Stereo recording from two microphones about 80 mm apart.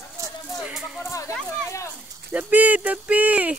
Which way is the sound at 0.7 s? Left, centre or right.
Centre.